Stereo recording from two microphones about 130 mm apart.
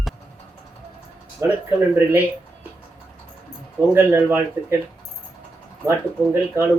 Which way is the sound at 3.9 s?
15° right (ahead or behind).